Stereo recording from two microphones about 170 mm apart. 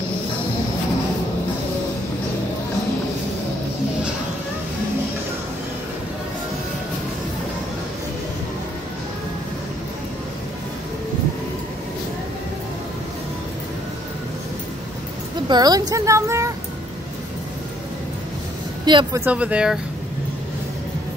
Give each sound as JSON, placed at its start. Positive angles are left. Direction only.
{"t": 15.4, "sound": "a woman's voice", "side_deg": -25}
{"t": 18.9, "sound": "speech", "side_deg": -25}
{"t": 19.2, "sound": "speech", "side_deg": -5}